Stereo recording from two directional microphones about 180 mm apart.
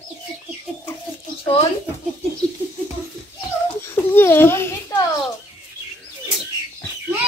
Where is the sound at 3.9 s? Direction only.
15° left (ahead or behind).